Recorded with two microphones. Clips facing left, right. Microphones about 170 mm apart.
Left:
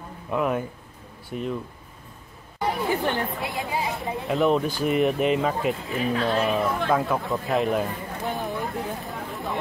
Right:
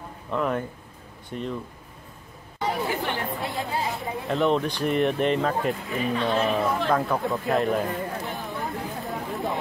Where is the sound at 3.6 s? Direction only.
20° left (ahead or behind).